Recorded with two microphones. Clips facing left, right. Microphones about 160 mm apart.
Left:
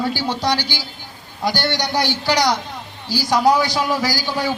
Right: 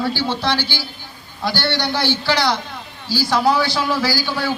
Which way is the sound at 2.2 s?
15° left (ahead or behind).